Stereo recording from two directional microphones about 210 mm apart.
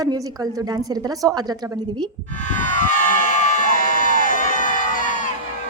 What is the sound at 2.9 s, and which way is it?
Crowd, 35° left (ahead or behind).